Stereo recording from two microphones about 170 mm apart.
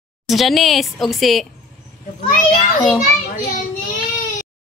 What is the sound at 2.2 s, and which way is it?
Speech, 55° left (ahead or behind).